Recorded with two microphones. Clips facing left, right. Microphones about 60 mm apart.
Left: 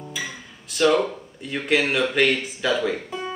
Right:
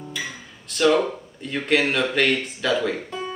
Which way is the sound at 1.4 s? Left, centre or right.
Centre.